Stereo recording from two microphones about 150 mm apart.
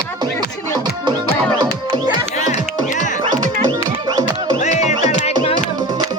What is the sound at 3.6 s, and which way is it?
Music, 30° right (ahead or behind).